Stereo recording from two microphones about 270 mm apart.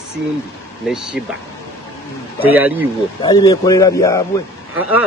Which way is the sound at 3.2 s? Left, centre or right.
Centre.